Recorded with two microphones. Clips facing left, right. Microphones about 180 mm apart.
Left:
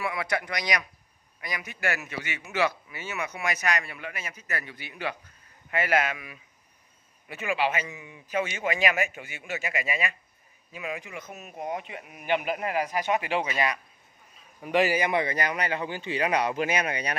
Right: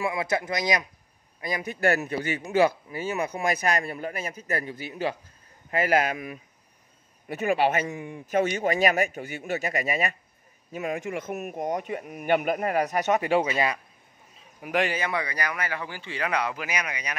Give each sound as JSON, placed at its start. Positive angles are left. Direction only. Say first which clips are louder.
{"t": 0.0, "sound": "a man's voice", "louder": "right 3 dB", "side_deg": -25}
{"t": 13.5, "sound": "speech", "louder": "right 2 dB", "side_deg": -30}
{"t": 14.7, "sound": "speech", "louder": "left 2 dB", "side_deg": 5}
{"t": 15.0, "sound": "speech", "louder": "left 3 dB", "side_deg": 20}